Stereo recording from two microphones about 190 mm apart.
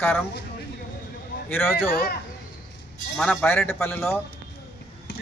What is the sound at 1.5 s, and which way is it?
Speech, 10° left (ahead or behind).